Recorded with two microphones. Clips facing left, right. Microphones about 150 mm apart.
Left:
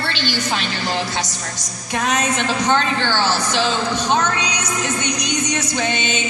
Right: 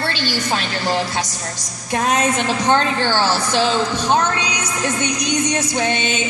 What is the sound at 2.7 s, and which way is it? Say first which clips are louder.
Speech: right 3 dB; 40° right (ahead or behind).